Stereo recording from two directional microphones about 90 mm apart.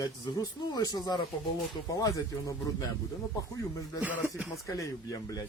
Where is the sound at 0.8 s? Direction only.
45° left (ahead or behind).